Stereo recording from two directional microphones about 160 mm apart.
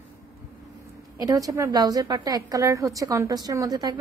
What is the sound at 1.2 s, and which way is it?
A woman's voice, 20° right (ahead or behind).